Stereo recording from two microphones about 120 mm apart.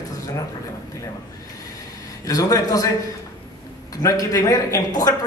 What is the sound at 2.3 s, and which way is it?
Speech, 30° left (ahead or behind).